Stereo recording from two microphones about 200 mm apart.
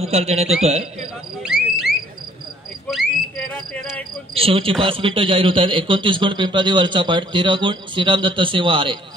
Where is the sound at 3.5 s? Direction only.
5° left (ahead or behind).